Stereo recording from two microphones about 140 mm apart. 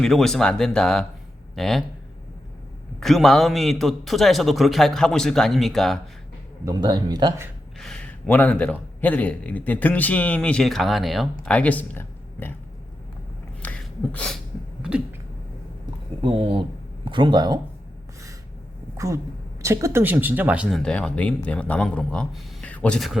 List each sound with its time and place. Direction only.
0.0 s speech: 5° left (ahead or behind)
3.0 s speech: centre (ahead or behind)
6.7 s speech: 30° right (ahead or behind)
7.8 s a man's voice: 5° left (ahead or behind)
13.6 s a sound: 10° left (ahead or behind)
14.8 s a sound: 5° right (ahead or behind)
16.2 s speech: 40° right (ahead or behind)
18.9 s a woman's voice: 25° right (ahead or behind); by 23.0 s 10° left (ahead or behind)